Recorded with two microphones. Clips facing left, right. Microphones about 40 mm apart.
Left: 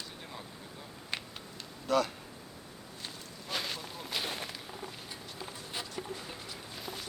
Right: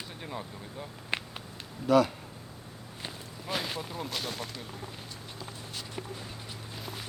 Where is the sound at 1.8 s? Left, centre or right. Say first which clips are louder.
Right 6 dB; centre.